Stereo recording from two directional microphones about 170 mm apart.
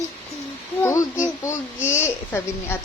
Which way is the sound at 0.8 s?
15° left (ahead or behind).